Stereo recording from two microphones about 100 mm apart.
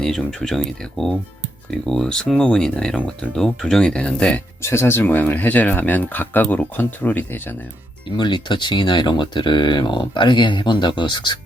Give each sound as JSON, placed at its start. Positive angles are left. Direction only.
{"t": 0.0, "sound": "speech", "side_deg": 5}
{"t": 4.6, "sound": "speech", "side_deg": 25}
{"t": 8.0, "sound": "speech", "side_deg": 55}